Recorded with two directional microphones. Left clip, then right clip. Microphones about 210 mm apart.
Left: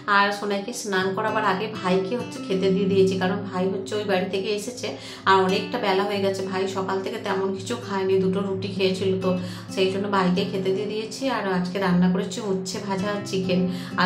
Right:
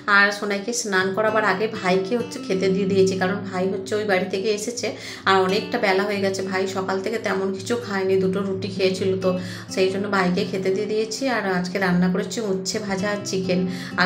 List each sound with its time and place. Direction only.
0.1 s a woman's voice: 20° right (ahead or behind)
8.7 s a woman's voice: 15° right (ahead or behind)
13.0 s a woman's voice: 15° right (ahead or behind)